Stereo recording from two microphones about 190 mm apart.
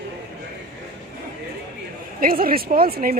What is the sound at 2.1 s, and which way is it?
A woman's voice, 50° right (ahead or behind).